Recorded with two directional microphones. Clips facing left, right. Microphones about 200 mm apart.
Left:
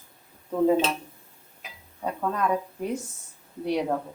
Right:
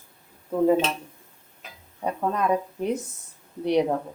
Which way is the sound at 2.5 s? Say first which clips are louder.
Right 3 dB; 20° right (ahead or behind).